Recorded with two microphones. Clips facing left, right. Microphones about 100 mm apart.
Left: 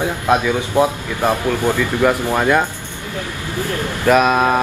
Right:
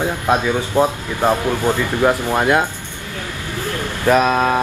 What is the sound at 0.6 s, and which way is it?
Speech, 15° left (ahead or behind).